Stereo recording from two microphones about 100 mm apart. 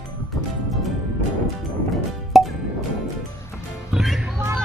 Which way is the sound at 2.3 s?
5° right (ahead or behind).